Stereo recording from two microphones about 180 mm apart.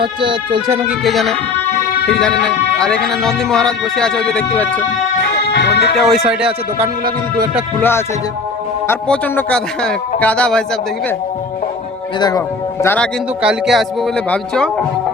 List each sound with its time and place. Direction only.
0.0 s speech: 25° right (ahead or behind)
0.7 s speech: 10° right (ahead or behind)
1.0 s speech: centre (ahead or behind)
5.5 s music: 70° left (ahead or behind)
6.0 s speech: centre (ahead or behind)
7.8 s a man's voice: 10° left (ahead or behind)
12.8 s a man's voice: 10° left (ahead or behind)
13.4 s speech: 5° right (ahead or behind)